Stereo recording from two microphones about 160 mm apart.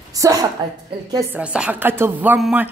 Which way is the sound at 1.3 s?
5° right (ahead or behind).